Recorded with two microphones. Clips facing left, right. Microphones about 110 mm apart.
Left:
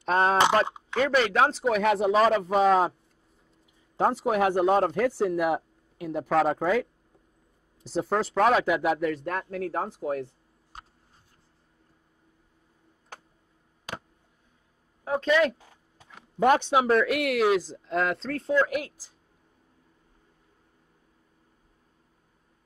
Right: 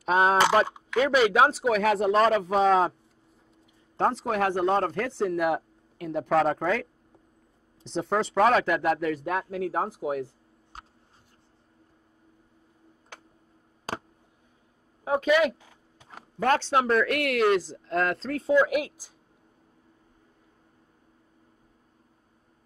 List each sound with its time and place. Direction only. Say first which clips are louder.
0.0 s speech: right 1 dB; 5° right (ahead or behind)
0.7 s a sound: left 2 dB; 20° left (ahead or behind)
0.9 s speech: right 2 dB; 5° right (ahead or behind)
3.9 s speech: left 2 dB; 10° left (ahead or behind); by 10.3 s 10° right (ahead or behind)
13.9 s a sound: right 4 dB; 35° right (ahead or behind)
15.0 s speech: right 1 dB; 10° right (ahead or behind)
16.3 s speech: left 2 dB; 15° left (ahead or behind)
16.8 s speech: left 1 dB; 5° left (ahead or behind); by 18.9 s 10° right (ahead or behind)